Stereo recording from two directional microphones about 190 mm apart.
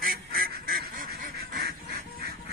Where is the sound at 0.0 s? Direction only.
50° right (ahead or behind).